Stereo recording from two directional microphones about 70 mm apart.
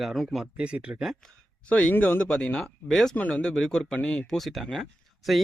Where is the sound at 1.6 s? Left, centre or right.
Centre.